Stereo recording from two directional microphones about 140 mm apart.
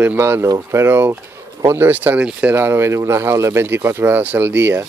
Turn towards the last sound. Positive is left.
turn(degrees=-15)  # may be behind; listen again after turning